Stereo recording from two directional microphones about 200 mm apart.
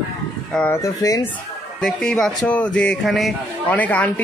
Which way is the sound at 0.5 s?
10° left (ahead or behind).